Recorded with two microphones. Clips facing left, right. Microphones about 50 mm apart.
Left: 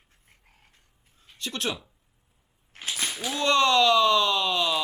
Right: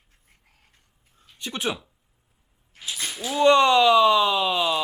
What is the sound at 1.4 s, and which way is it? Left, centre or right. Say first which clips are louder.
Speech: right 2 dB; centre.